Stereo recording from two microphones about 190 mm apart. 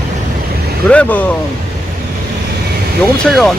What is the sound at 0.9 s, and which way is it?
Speech, 5° left (ahead or behind).